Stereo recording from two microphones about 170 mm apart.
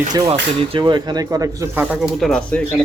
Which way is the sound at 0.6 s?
30° right (ahead or behind).